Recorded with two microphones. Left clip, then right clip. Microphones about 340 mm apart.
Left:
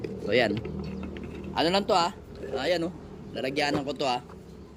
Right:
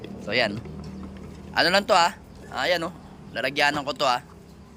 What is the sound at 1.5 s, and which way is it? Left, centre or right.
Speech, centre.